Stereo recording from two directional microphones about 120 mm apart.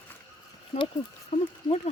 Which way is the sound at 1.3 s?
55° left (ahead or behind).